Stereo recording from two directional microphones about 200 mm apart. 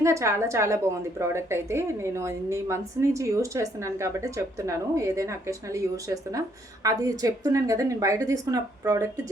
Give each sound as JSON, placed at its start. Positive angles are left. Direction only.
{"t": 0.0, "sound": "a woman's voice", "side_deg": -15}
{"t": 6.8, "sound": "a woman's voice", "side_deg": -15}